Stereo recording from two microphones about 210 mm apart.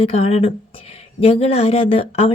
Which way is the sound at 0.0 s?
30° left (ahead or behind).